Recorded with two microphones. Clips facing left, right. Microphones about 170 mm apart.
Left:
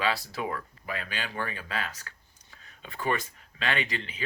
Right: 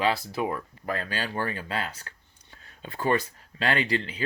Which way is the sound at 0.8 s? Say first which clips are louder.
Right 6 dB; 40° right (ahead or behind).